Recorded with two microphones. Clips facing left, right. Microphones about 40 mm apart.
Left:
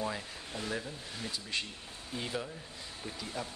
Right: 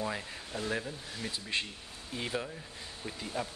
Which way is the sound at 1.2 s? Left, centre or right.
Right.